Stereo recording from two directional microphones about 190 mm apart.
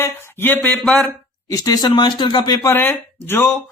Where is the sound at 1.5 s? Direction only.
20° left (ahead or behind).